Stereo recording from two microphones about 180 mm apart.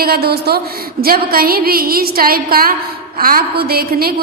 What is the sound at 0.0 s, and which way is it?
A woman's voice, 60° right (ahead or behind).